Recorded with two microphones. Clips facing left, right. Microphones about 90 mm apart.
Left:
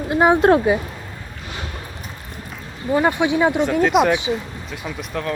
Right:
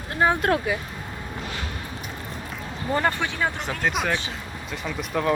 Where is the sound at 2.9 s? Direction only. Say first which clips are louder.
Left 7 dB; 15° left (ahead or behind).